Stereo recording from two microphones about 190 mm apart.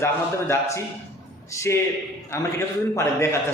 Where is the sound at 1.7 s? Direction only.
15° left (ahead or behind).